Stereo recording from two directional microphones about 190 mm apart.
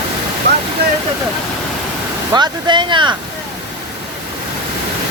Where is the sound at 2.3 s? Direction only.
25° right (ahead or behind).